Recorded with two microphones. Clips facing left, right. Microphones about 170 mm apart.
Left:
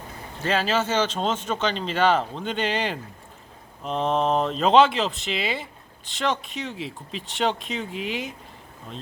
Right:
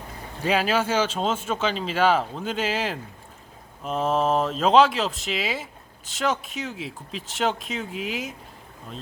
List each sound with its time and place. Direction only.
0.4 s speech: 10° right (ahead or behind)